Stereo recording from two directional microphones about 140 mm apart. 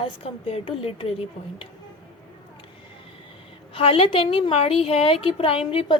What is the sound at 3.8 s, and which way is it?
A woman's voice, 45° left (ahead or behind).